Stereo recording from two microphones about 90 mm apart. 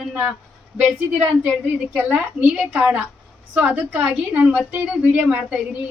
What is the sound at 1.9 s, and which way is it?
Speech, 15° right (ahead or behind).